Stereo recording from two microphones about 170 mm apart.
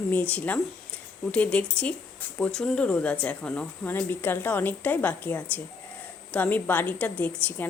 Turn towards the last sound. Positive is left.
turn(degrees=10)  # may be behind; listen again after turning